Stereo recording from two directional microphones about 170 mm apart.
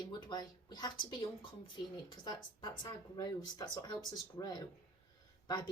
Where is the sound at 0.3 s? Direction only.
25° left (ahead or behind).